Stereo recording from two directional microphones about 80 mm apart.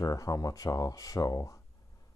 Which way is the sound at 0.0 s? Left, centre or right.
Left.